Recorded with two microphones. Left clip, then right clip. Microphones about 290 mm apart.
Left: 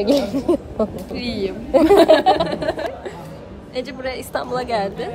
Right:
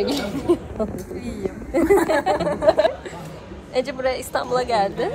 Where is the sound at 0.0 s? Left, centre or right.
Left.